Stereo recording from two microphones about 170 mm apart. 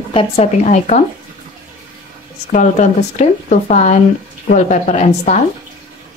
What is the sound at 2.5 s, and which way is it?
Speech, 45° left (ahead or behind).